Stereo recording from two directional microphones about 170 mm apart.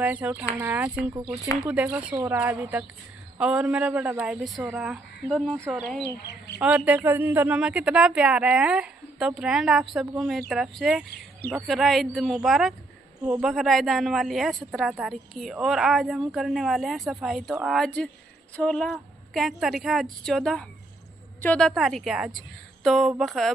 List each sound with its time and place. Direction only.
0.0 s a woman's voice: 10° right (ahead or behind)
1.1 s speech: 20° right (ahead or behind)
1.6 s a woman's voice: 10° right (ahead or behind)
6.2 s speech: 75° left (ahead or behind)
6.6 s a woman's voice: 10° right (ahead or behind)